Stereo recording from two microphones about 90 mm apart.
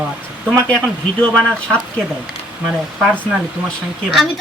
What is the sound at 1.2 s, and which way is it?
Speech, 10° left (ahead or behind).